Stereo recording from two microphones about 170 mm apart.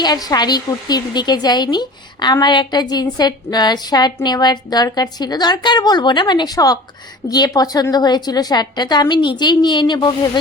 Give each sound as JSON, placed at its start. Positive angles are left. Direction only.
{"t": 0.0, "sound": "a woman's voice", "side_deg": 25}